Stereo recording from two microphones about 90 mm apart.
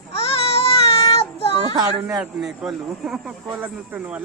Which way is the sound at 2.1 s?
5° right (ahead or behind).